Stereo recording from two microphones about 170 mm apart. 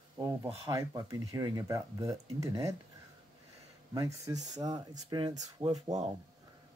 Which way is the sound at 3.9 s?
20° right (ahead or behind).